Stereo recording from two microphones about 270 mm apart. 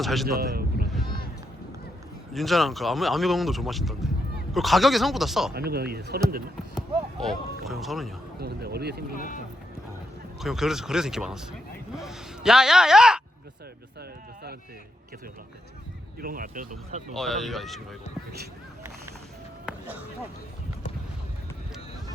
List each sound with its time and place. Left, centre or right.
0.0 s speech: centre
0.3 s speech: right
2.3 s speech: centre
5.5 s speech: right
6.7 s speech: centre
8.4 s speech: right
9.1 s speech: left
10.4 s speech: centre
16.2 s speech: right
17.2 s speech: centre
19.6 s a sound: centre